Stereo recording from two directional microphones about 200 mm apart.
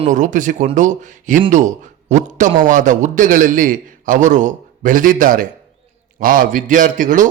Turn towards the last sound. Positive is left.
turn(degrees=-40)  # may be behind; listen again after turning